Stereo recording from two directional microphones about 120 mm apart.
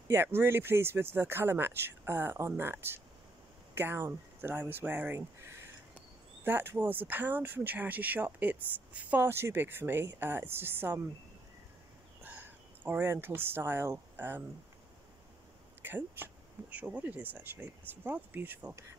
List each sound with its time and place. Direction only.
0.1 s speech: 20° right (ahead or behind)
12.2 s speech: 15° right (ahead or behind)
15.8 s speech: 15° right (ahead or behind)